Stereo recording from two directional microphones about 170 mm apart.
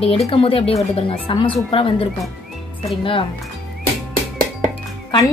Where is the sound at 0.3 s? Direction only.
35° left (ahead or behind).